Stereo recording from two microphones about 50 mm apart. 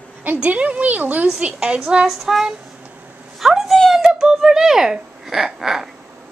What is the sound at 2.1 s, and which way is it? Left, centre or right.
Child singing, centre.